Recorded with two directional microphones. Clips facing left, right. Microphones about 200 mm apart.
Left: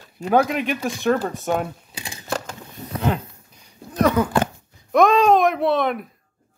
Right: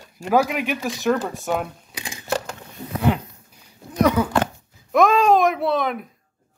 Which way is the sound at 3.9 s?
10° right (ahead or behind).